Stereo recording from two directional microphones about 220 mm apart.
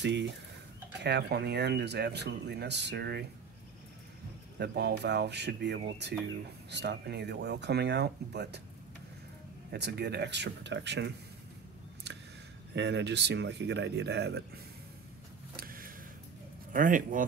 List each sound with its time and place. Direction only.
0.0 s speech: 55° right (ahead or behind)
4.6 s speech: 50° right (ahead or behind)
9.7 s speech: 50° right (ahead or behind)
12.7 s speech: 50° right (ahead or behind)
15.5 s a sound: 40° right (ahead or behind)
16.7 s speech: 35° right (ahead or behind)